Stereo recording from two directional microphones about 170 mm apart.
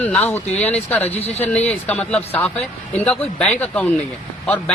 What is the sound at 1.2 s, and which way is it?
Speech, 35° left (ahead or behind).